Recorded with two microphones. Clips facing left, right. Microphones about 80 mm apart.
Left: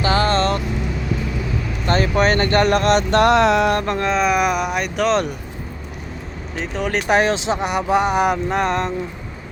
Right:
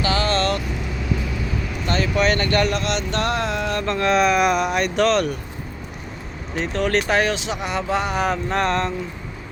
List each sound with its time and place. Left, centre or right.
0.0 s vehicle: left
1.9 s speech: left
2.7 s mantra: left
4.0 s speech: centre
5.1 s speech: left
6.6 s speech: centre
7.1 s speech: left; by 8.9 s centre